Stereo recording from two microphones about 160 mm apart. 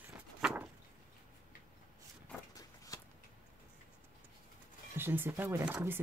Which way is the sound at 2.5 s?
20° left (ahead or behind).